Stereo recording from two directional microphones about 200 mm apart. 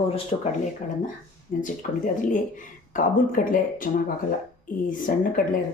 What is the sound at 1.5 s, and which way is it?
Speech, 40° left (ahead or behind).